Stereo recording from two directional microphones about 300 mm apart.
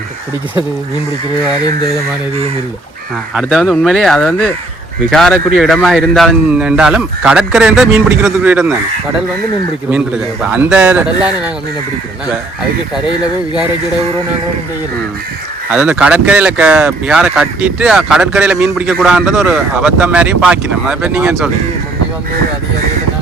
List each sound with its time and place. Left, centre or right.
3.3 s speech: centre
10.4 s speech: centre
15.7 s speech: centre